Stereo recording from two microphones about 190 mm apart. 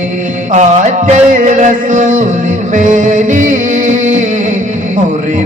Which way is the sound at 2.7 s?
40° right (ahead or behind).